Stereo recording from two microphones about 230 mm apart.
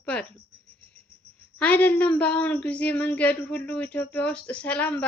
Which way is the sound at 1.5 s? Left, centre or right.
Centre.